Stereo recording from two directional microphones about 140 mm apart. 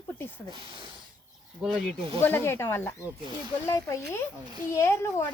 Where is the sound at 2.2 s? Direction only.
15° left (ahead or behind).